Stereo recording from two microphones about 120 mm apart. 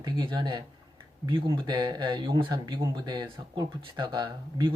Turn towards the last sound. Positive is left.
turn(degrees=-35)  # may be behind; listen again after turning